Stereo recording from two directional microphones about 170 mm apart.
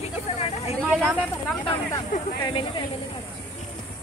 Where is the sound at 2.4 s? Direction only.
30° left (ahead or behind).